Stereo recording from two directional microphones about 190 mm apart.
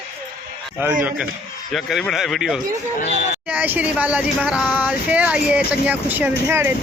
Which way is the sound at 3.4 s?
10° right (ahead or behind).